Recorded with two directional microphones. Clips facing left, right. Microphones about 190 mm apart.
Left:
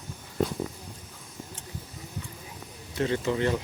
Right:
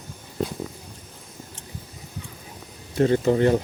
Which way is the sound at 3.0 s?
45° right (ahead or behind).